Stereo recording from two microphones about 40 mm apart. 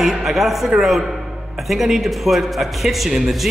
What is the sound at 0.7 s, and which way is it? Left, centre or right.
Speech, centre.